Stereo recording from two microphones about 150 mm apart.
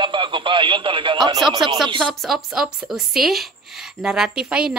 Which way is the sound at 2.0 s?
Centre (ahead or behind).